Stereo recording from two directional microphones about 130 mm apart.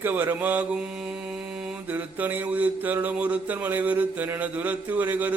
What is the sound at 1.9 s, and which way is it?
Mantra, 15° right (ahead or behind).